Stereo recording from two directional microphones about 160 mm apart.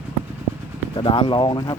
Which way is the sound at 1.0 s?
30° left (ahead or behind).